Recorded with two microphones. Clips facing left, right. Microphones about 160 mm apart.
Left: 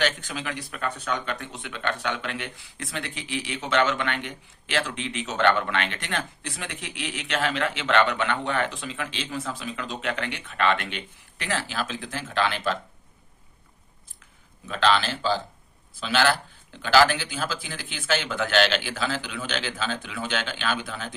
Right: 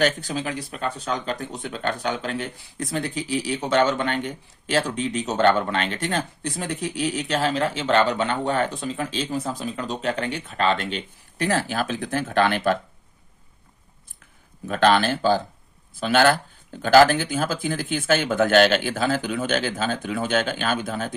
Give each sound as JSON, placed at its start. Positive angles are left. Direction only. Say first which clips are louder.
{"t": 0.0, "sound": "speech", "louder": "right 5 dB", "side_deg": -35}
{"t": 14.7, "sound": "speech", "louder": "right 5 dB", "side_deg": -50}